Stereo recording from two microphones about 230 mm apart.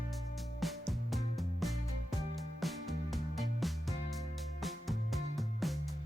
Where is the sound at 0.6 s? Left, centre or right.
Centre.